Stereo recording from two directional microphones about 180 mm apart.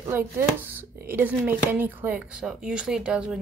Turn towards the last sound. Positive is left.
turn(degrees=-5)  # may be behind; listen again after turning